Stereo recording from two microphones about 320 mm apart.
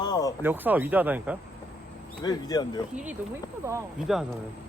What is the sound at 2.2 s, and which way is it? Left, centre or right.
Speech, centre.